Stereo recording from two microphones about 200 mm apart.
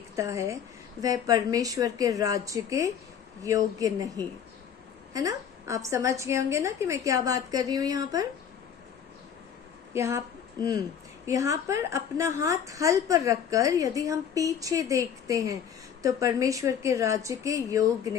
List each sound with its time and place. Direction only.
0.2 s a woman's voice: 15° right (ahead or behind)
9.9 s a woman's voice: 15° right (ahead or behind)